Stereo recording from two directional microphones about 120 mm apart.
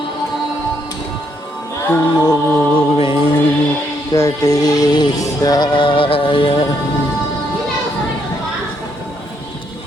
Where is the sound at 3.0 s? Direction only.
50° left (ahead or behind).